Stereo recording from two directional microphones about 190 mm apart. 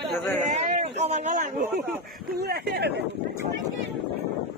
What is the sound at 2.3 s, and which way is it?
Speech, 55° right (ahead or behind).